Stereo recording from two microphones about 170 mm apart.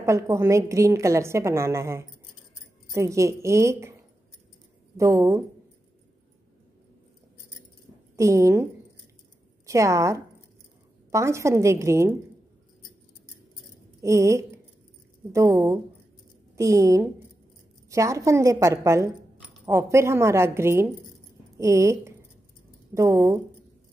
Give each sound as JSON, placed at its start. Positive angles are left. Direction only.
{"t": 0.0, "sound": "a woman's voice", "side_deg": -15}
{"t": 4.9, "sound": "a woman's voice", "side_deg": -20}
{"t": 8.2, "sound": "a woman's voice", "side_deg": -15}
{"t": 9.7, "sound": "a woman's voice", "side_deg": -20}
{"t": 14.0, "sound": "a woman's voice", "side_deg": -15}